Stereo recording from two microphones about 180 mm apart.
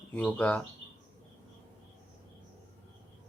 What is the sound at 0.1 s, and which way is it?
Speech, 5° left (ahead or behind).